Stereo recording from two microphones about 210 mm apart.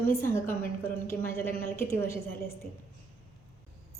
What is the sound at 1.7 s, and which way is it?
Speech, 10° left (ahead or behind).